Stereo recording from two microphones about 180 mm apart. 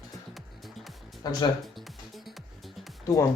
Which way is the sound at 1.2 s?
25° left (ahead or behind).